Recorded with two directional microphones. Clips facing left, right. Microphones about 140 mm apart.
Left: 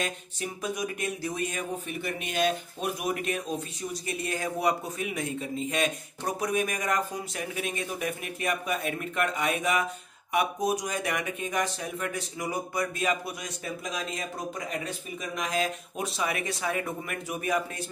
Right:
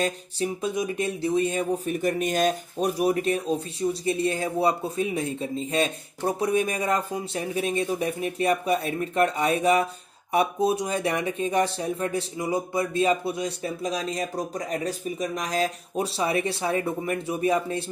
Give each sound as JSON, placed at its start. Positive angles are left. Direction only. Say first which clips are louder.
{"t": 0.0, "sound": "speech", "louder": "right 7 dB", "side_deg": -30}